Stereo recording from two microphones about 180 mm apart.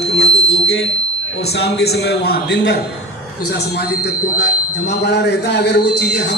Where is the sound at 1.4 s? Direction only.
65° left (ahead or behind).